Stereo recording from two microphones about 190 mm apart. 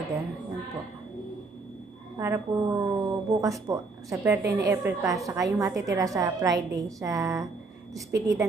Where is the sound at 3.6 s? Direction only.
15° right (ahead or behind).